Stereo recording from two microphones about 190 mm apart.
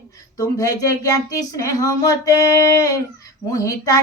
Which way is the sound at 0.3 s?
20° left (ahead or behind).